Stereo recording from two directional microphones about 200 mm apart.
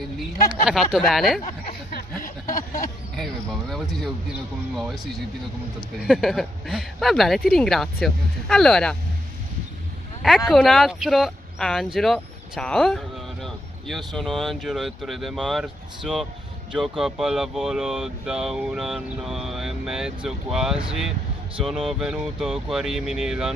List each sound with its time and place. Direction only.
0.9 s speech: centre (ahead or behind)
1.4 s a sound: 50° left (ahead or behind)
3.7 s speech: centre (ahead or behind)
6.0 s speech: centre (ahead or behind)
10.2 s speech: centre (ahead or behind)